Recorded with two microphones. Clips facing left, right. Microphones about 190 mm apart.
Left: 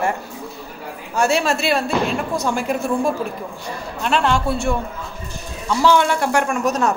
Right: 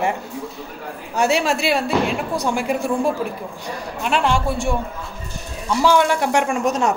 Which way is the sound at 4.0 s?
10° right (ahead or behind).